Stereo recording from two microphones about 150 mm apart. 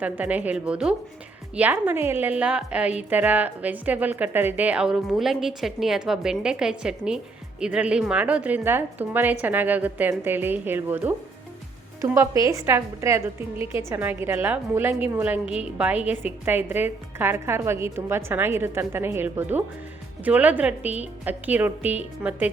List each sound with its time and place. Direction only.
0.0 s a woman's voice: 10° right (ahead or behind)